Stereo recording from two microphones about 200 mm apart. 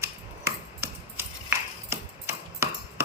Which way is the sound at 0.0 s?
10° right (ahead or behind).